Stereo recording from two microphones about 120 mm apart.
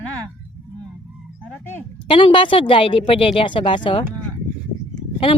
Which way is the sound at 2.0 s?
45° left (ahead or behind).